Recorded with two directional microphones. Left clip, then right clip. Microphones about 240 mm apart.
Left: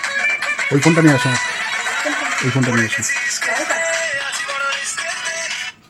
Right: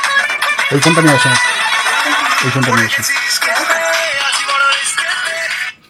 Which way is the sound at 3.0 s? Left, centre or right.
Right.